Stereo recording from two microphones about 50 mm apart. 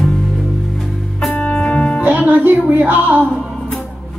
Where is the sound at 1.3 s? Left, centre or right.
Left.